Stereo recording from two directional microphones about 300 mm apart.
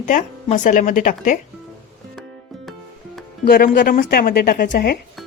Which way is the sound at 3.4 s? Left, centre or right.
Left.